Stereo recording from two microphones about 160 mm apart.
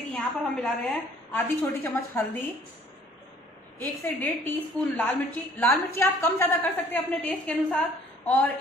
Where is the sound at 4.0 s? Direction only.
15° left (ahead or behind).